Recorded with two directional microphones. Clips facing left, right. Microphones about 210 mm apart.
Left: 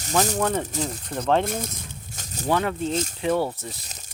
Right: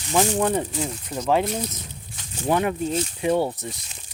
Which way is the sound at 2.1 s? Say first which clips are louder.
Right 1 dB; 40° left (ahead or behind).